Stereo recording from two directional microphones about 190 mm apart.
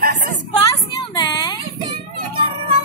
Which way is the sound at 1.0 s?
20° left (ahead or behind).